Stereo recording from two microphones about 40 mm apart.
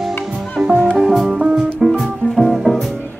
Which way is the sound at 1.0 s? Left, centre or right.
Centre.